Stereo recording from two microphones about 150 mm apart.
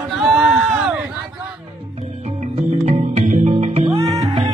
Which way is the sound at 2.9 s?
50° right (ahead or behind).